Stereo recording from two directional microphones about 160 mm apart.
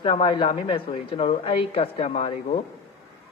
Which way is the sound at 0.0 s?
35° left (ahead or behind).